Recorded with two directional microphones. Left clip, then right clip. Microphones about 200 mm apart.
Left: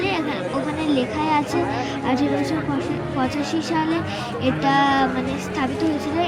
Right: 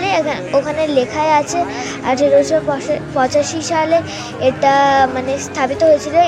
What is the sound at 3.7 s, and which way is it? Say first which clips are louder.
A woman's voice: right 11 dB; 45° right (ahead or behind).